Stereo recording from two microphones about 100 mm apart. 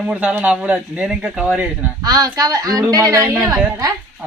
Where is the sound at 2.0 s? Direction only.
35° right (ahead or behind).